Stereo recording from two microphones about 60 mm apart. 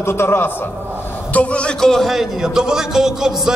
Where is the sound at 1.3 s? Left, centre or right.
Left.